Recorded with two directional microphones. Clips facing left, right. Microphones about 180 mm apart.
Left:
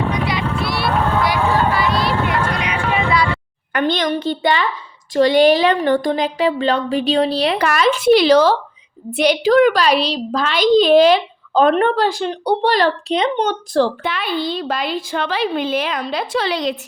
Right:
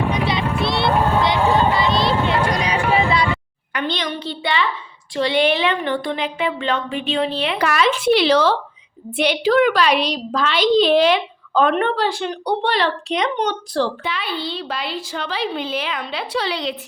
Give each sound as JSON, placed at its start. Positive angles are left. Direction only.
{"t": 0.1, "sound": "a sound", "side_deg": -25}
{"t": 2.6, "sound": "vehicle", "side_deg": -35}
{"t": 3.7, "sound": "a woman's voice", "side_deg": 50}
{"t": 13.1, "sound": "speech", "side_deg": 30}
{"t": 13.5, "sound": "speech", "side_deg": 50}